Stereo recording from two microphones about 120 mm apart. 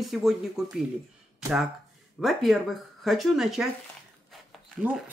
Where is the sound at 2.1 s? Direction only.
Centre (ahead or behind).